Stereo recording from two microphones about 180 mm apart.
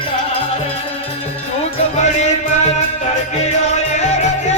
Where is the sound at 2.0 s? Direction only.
40° left (ahead or behind).